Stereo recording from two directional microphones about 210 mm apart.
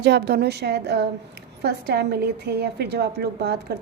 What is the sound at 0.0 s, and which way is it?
A woman's voice, 50° right (ahead or behind).